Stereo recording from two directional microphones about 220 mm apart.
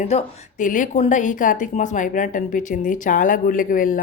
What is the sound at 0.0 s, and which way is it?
Speech, 30° left (ahead or behind).